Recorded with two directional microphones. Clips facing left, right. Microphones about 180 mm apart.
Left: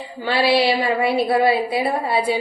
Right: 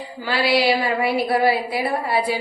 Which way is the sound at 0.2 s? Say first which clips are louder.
Left 2 dB; 25° left (ahead or behind).